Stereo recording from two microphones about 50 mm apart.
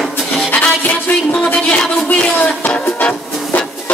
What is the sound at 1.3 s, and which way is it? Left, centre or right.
Speech, left.